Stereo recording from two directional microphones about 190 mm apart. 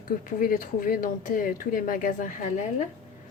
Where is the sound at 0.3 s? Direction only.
45° left (ahead or behind).